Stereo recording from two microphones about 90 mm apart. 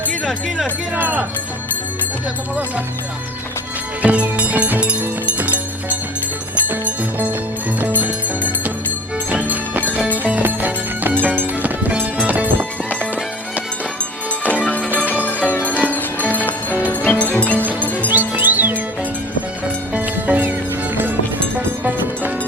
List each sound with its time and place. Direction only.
0.3 s speech: centre (ahead or behind)
0.9 s speech: 20° right (ahead or behind)
4.0 s music: 15° right (ahead or behind)
9.3 s music: 20° right (ahead or behind)
14.6 s music: 15° left (ahead or behind)
17.6 s music: 20° right (ahead or behind)
19.9 s music: 15° right (ahead or behind)
21.8 s music: 20° right (ahead or behind)